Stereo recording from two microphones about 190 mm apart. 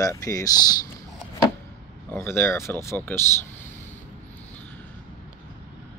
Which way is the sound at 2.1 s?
10° left (ahead or behind).